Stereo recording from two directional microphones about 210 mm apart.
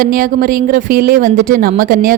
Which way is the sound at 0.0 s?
40° right (ahead or behind).